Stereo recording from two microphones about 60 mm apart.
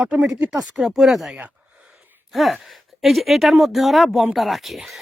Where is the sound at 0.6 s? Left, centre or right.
Centre.